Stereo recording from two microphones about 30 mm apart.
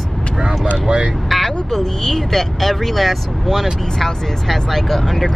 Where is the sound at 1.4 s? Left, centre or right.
Centre.